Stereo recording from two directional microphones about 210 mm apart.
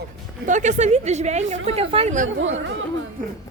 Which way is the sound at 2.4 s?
65° right (ahead or behind).